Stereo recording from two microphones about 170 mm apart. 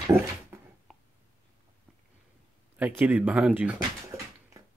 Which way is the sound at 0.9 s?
Centre (ahead or behind).